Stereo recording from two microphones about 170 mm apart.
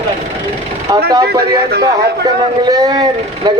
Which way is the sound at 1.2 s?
65° right (ahead or behind).